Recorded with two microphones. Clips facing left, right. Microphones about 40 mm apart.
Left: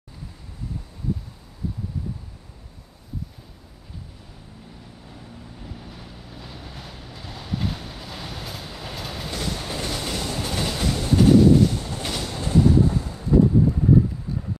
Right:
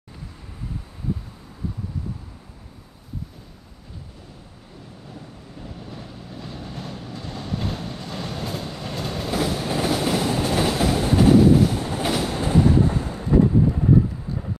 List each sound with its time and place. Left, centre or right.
5.1 s vehicle: centre
9.4 s train: centre
12.3 s train: right